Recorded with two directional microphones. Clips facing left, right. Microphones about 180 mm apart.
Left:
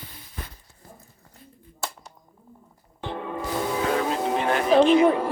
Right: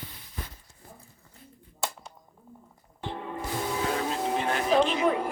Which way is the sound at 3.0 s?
75° left (ahead or behind).